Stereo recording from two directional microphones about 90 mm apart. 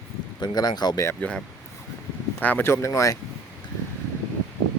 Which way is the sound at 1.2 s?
10° left (ahead or behind).